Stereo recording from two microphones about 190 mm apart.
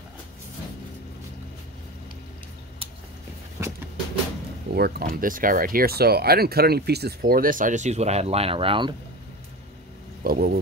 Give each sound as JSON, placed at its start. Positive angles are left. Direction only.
{"t": 3.6, "sound": "a sound", "side_deg": -15}
{"t": 4.7, "sound": "speech", "side_deg": -55}
{"t": 10.2, "sound": "speech", "side_deg": -50}